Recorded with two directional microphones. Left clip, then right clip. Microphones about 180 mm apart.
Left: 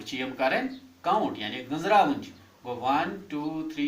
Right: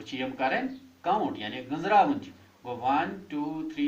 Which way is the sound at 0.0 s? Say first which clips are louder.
Left 2 dB; 20° left (ahead or behind).